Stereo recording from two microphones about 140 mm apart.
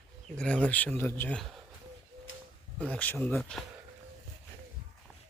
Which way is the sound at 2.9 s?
10° left (ahead or behind).